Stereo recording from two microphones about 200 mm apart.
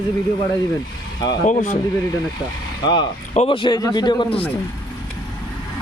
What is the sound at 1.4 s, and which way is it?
Speech, 40° left (ahead or behind).